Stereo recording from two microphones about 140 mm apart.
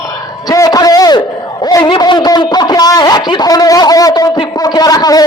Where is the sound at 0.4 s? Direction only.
25° left (ahead or behind).